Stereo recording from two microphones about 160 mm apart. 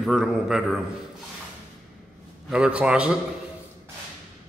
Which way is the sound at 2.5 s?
5° right (ahead or behind).